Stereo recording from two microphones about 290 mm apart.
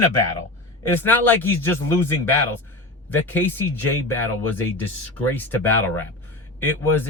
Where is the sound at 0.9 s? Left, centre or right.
Centre.